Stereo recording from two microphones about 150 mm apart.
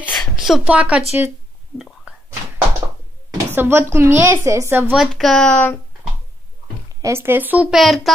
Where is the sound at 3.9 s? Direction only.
15° right (ahead or behind).